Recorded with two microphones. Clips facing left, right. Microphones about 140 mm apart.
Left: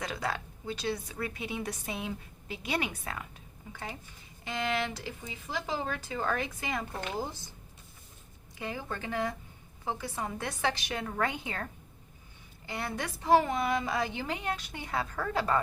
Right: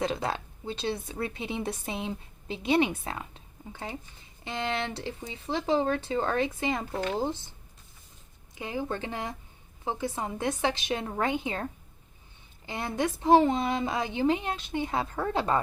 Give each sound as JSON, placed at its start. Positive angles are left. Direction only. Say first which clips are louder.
{"t": 0.0, "sound": "a woman's voice", "louder": "right 5 dB", "side_deg": -25}
{"t": 8.5, "sound": "a woman's voice", "louder": "right 5 dB", "side_deg": -20}